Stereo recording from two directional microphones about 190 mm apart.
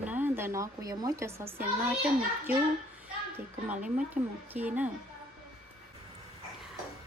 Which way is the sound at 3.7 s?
5° right (ahead or behind).